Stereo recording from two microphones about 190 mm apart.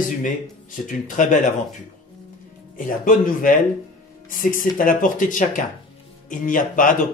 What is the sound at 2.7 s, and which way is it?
Speech, 45° left (ahead or behind).